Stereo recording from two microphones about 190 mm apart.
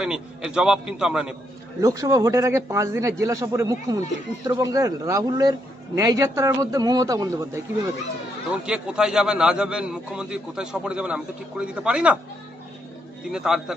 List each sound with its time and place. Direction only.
0.0 s a man's voice: 5° right (ahead or behind)
1.8 s a man's voice: 15° right (ahead or behind)
8.6 s a man's voice: 5° right (ahead or behind)
13.3 s a man's voice: 5° right (ahead or behind)